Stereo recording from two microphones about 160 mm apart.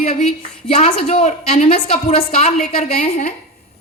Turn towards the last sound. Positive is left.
turn(degrees=50)  # may be behind; listen again after turning